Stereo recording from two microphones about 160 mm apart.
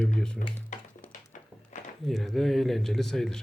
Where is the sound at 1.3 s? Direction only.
50° left (ahead or behind).